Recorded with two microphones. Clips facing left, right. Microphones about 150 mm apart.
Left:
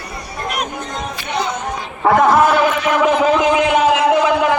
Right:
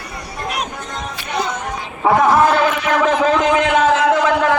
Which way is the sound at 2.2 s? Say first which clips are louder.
Even; 15° left (ahead or behind).